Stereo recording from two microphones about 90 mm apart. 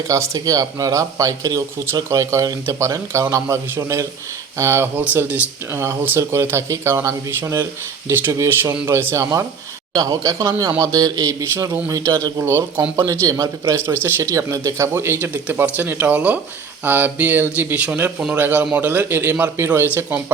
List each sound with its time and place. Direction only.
0.1 s speech: 40° right (ahead or behind)
9.9 s speech: 45° right (ahead or behind)
12.4 s speech: 30° right (ahead or behind)
13.1 s speech: 40° right (ahead or behind)
13.8 s speech: 25° right (ahead or behind)